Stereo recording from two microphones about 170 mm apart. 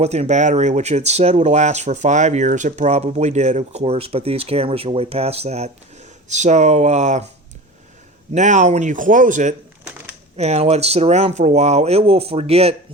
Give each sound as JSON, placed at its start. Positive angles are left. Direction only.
{"t": 0.0, "sound": "a man's voice", "side_deg": -40}
{"t": 8.3, "sound": "a man's voice", "side_deg": -45}